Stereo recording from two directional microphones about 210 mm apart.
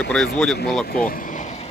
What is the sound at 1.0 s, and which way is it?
Vehicle, 40° left (ahead or behind).